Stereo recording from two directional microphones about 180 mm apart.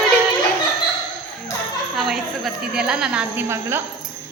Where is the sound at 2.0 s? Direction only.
Centre (ahead or behind).